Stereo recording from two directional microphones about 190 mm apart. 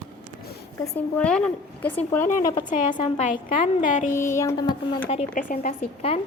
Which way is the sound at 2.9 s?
25° left (ahead or behind).